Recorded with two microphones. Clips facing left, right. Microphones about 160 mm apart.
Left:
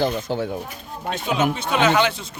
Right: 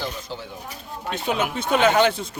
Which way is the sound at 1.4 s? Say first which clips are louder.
Even; 55° right (ahead or behind).